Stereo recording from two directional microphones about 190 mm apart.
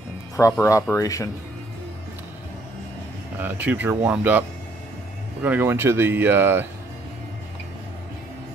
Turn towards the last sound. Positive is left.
turn(degrees=-10)  # may be behind; listen again after turning